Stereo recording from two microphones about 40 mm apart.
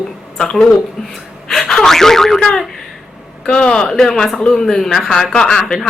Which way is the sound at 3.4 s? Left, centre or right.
Left.